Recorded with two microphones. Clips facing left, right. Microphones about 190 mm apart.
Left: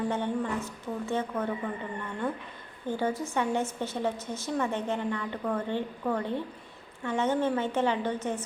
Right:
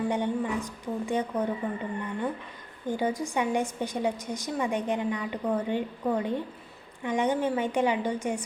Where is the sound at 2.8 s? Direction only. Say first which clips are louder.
Right 1 dB; 15° right (ahead or behind).